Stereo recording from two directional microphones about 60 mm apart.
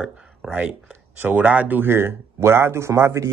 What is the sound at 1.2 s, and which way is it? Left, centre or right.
Speech, right.